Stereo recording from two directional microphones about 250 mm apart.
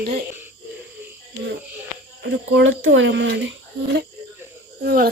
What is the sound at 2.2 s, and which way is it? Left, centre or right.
Speech, right.